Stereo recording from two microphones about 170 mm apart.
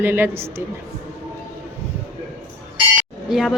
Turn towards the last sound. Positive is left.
turn(degrees=0)  # may be behind; listen again after turning